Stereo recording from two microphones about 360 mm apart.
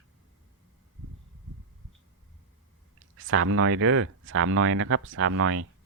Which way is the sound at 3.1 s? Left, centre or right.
Right.